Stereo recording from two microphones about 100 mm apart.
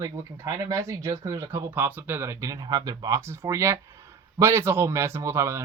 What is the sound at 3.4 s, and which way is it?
Speech, 30° right (ahead or behind).